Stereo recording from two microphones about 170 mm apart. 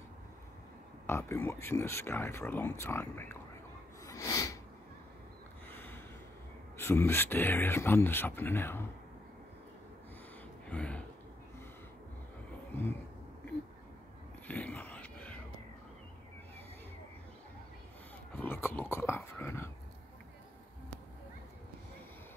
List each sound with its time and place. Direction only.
1.0 s speech: 15° left (ahead or behind)
4.0 s snort: 20° left (ahead or behind)
5.7 s a sound: 15° left (ahead or behind)
6.8 s speech: 15° left (ahead or behind)
10.7 s speech: 5° left (ahead or behind)
14.5 s a sound: 10° left (ahead or behind)
18.3 s dog: 10° left (ahead or behind)